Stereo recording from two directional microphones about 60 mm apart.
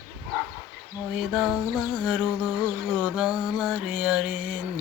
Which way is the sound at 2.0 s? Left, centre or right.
Centre.